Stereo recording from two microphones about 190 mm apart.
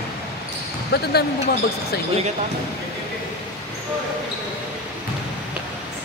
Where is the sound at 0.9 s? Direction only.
55° left (ahead or behind).